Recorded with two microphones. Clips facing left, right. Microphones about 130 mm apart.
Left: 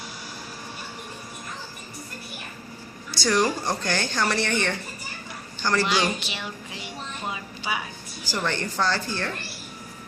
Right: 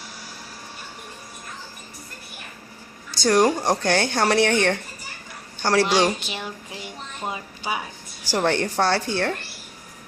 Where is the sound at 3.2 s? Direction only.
55° right (ahead or behind).